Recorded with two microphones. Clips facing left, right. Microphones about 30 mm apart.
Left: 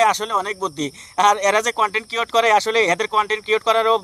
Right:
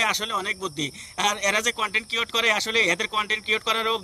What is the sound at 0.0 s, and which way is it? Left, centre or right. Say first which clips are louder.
Speech: left 7 dB; centre.